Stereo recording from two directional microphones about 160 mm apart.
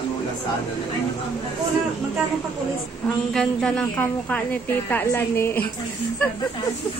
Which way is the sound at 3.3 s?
5° left (ahead or behind).